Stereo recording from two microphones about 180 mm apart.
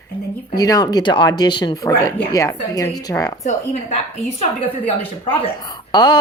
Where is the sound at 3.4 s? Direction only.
40° left (ahead or behind).